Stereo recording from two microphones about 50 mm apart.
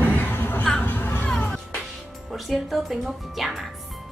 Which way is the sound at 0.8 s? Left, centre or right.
Left.